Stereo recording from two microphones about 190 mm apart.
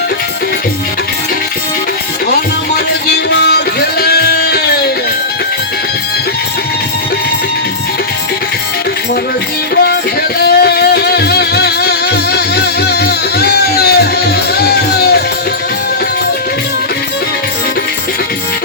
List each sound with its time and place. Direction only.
2.3 s music: 60° left (ahead or behind)
10.4 s music: 55° left (ahead or behind)